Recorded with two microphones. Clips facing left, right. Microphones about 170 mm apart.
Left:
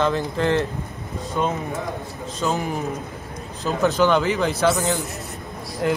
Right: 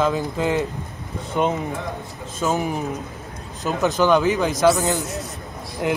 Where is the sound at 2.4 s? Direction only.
5° right (ahead or behind).